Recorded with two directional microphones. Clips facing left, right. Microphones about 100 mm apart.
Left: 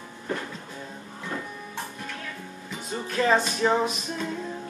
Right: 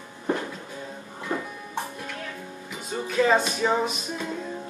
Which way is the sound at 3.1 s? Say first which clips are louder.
Right 1 dB; 5° right (ahead or behind).